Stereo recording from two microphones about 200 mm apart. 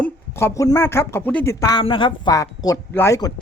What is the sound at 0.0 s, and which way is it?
Speech, 10° left (ahead or behind).